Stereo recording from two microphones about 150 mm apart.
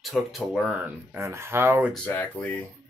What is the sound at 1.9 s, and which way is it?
Speech, 10° left (ahead or behind).